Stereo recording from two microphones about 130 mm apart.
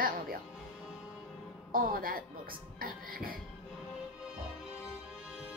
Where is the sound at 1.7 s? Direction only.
90° right.